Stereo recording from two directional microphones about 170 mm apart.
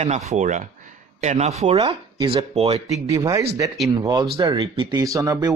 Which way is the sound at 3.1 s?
20° right (ahead or behind).